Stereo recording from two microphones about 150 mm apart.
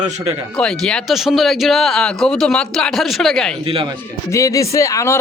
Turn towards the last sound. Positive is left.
turn(degrees=20)  # may be behind; listen again after turning